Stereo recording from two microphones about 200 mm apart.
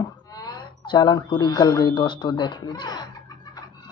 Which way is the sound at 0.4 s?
20° left (ahead or behind).